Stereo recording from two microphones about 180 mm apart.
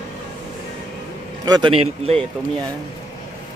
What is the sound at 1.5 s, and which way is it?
Speech, 25° right (ahead or behind).